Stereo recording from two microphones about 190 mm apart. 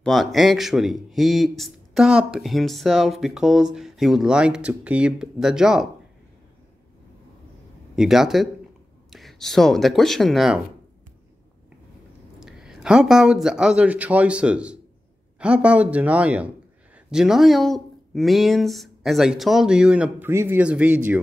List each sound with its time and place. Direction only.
0.0 s a man's voice: centre (ahead or behind)
7.9 s a man's voice: centre (ahead or behind)
12.4 s a man's voice: 5° right (ahead or behind)